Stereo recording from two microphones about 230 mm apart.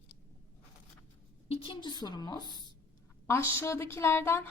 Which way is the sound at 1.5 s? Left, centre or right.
Left.